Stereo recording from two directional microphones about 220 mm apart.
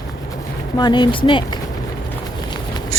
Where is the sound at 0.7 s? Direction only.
20° left (ahead or behind).